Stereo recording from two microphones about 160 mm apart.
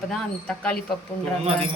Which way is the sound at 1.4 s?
40° right (ahead or behind).